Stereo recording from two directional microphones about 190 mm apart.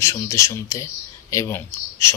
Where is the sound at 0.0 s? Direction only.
15° left (ahead or behind).